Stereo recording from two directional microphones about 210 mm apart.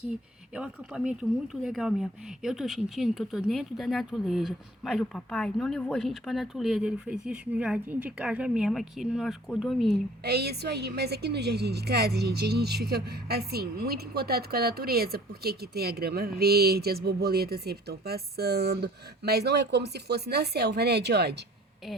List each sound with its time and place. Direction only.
0.5 s speech: 5° right (ahead or behind)
9.9 s a woman's voice: 50° right (ahead or behind)